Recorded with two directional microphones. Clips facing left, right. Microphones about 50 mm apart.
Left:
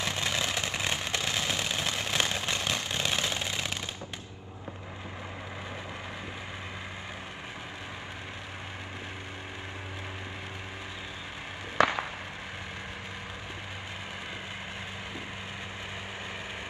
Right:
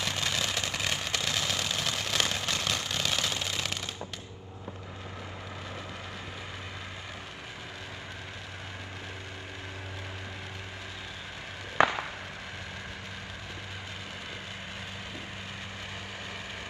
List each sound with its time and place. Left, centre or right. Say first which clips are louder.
0.0 s vehicle: left 1 dB; left